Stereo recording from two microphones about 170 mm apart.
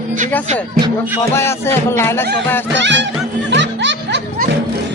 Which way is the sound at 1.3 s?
15° left (ahead or behind).